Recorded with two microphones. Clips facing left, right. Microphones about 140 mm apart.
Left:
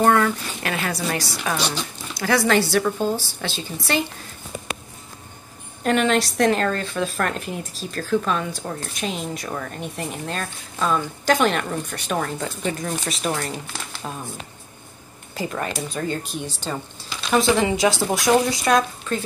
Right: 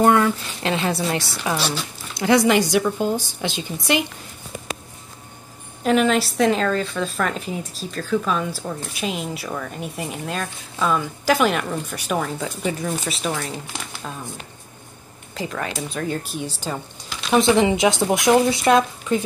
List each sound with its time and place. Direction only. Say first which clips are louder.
0.0 s a woman's voice: right 1 dB; 20° right (ahead or behind)
1.4 s speech: right 1 dB; 15° right (ahead or behind)
5.9 s a woman's voice: right 1 dB; centre (ahead or behind)
14.0 s speech: left 2 dB; 15° left (ahead or behind)
15.3 s a woman's voice: left 1 dB; centre (ahead or behind)
17.3 s a woman's voice: right 2 dB; 20° right (ahead or behind)